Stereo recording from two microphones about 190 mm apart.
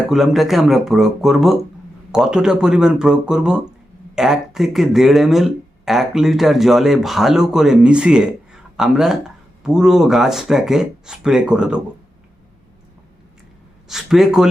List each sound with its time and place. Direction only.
0.1 s speech: centre (ahead or behind)
13.8 s speech: centre (ahead or behind)